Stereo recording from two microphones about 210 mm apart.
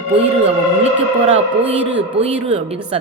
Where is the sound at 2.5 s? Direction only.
30° right (ahead or behind).